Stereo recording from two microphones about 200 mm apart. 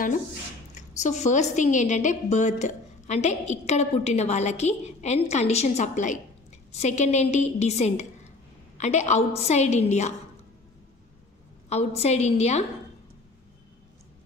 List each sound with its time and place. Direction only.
0.7 s a woman's voice: 35° left (ahead or behind)
11.7 s a woman's voice: 30° left (ahead or behind)